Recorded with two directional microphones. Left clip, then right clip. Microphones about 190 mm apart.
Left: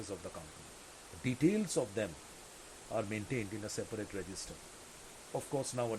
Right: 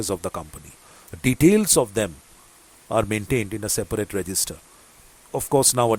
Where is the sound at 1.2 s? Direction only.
45° right (ahead or behind).